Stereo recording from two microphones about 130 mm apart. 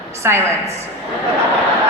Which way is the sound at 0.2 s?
20° right (ahead or behind).